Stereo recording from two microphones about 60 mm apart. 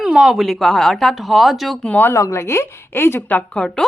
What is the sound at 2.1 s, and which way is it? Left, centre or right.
Speech, left.